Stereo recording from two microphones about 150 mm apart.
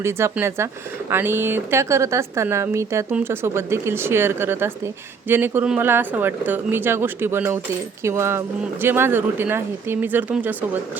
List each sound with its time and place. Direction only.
0.0 s speech: 15° right (ahead or behind)